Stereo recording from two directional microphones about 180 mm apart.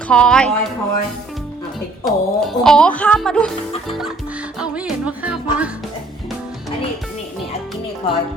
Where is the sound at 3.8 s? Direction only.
Centre (ahead or behind).